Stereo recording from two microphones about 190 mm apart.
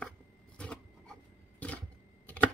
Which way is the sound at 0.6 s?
5° left (ahead or behind).